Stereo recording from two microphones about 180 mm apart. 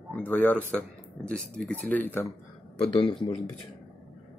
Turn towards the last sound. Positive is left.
turn(degrees=25)  # may be behind; listen again after turning